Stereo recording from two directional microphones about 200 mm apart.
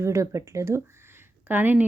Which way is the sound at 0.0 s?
15° right (ahead or behind).